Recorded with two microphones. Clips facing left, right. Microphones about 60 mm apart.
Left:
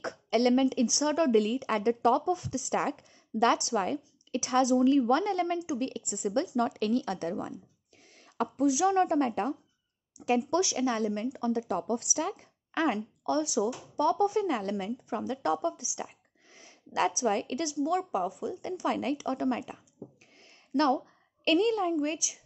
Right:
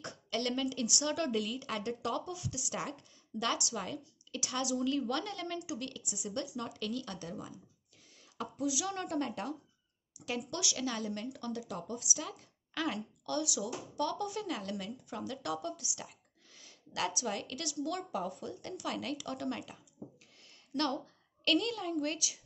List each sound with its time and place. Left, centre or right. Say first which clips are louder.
0.0 s a woman's voice: left 10 dB; left
11.6 s a woman's voice: left 10 dB; left